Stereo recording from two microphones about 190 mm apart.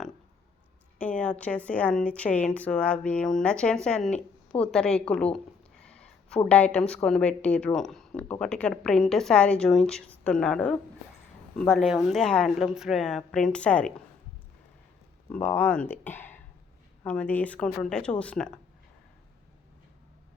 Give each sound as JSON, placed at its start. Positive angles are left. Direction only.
{"t": 0.9, "sound": "a woman's voice", "side_deg": 5}
{"t": 15.3, "sound": "speech", "side_deg": 10}